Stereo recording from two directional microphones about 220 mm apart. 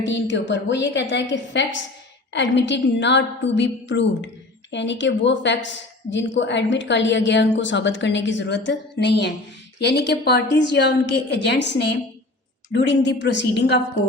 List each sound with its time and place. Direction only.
0.0 s a woman's voice: 55° left (ahead or behind)